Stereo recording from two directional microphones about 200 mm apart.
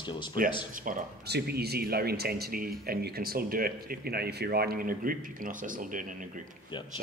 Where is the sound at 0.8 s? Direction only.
50° right (ahead or behind).